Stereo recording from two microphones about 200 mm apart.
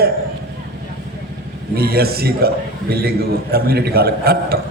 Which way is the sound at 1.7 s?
50° right (ahead or behind).